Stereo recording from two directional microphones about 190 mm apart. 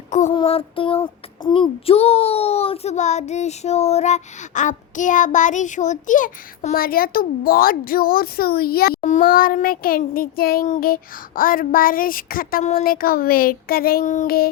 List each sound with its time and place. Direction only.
0.1 s a sound: 40° left (ahead or behind)
0.3 s child singing: 30° left (ahead or behind); by 9.0 s 55° left (ahead or behind)
9.0 s speech: 45° left (ahead or behind)